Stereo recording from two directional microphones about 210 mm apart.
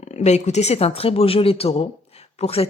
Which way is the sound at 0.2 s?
30° left (ahead or behind).